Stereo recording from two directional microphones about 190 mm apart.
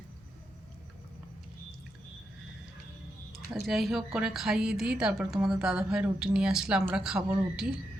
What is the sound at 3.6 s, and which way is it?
A woman's voice, centre (ahead or behind).